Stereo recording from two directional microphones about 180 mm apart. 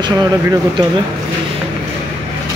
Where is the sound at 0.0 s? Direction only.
25° right (ahead or behind).